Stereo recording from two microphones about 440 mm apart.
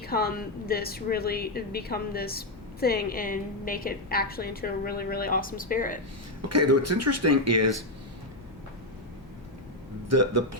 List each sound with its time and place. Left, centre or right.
0.0 s a woman's voice: left
6.5 s speech: right
10.1 s speech: right